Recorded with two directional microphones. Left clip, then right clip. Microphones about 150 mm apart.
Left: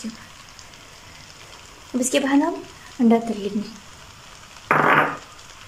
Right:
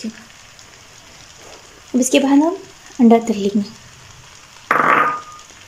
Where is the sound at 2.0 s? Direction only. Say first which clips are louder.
Right 6 dB; 20° right (ahead or behind).